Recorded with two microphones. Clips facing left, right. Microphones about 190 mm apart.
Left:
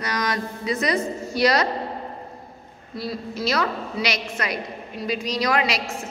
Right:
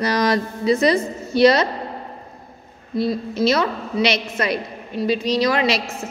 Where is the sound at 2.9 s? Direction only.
25° right (ahead or behind).